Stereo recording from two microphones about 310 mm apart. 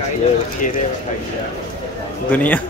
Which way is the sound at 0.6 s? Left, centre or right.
Left.